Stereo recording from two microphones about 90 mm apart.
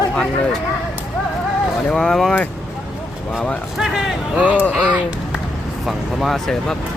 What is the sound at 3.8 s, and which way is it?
Speech, 5° right (ahead or behind).